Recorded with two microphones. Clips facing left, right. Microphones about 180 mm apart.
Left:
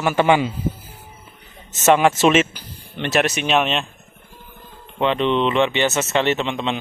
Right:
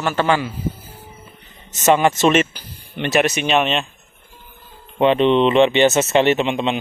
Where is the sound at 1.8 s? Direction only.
5° left (ahead or behind).